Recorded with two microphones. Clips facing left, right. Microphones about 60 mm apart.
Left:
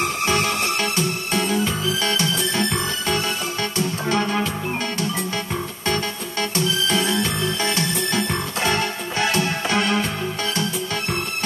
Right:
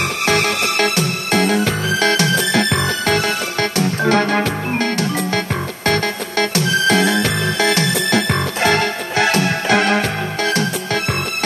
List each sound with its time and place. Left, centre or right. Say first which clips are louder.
0.3 s music: right 6 dB; right